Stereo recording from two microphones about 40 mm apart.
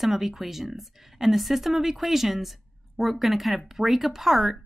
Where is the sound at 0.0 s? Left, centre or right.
Centre.